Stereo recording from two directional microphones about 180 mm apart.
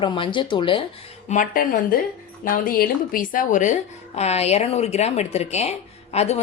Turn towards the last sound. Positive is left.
turn(degrees=35)  # may be behind; listen again after turning